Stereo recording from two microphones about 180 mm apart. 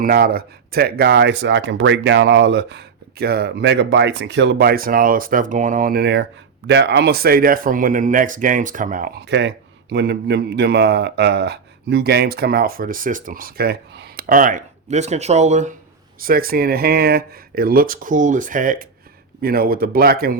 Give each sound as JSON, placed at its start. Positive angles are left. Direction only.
{"t": 0.0, "sound": "speech", "side_deg": -55}
{"t": 16.2, "sound": "speech", "side_deg": -55}